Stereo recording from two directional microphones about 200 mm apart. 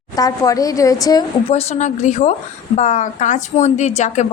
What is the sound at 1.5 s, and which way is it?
A woman's voice, 30° left (ahead or behind).